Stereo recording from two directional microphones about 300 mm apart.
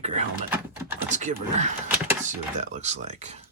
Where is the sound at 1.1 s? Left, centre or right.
Right.